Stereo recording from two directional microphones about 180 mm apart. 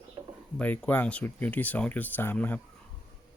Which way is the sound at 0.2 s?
25° right (ahead or behind).